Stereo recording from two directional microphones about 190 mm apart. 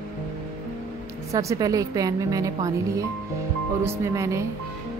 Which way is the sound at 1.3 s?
15° right (ahead or behind).